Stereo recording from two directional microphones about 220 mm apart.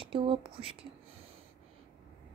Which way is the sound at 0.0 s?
25° right (ahead or behind).